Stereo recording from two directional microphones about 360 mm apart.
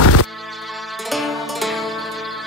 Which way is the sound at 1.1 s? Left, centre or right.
Centre.